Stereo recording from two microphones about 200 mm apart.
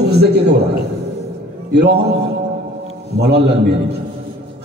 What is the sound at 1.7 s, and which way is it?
Speech, 55° right (ahead or behind).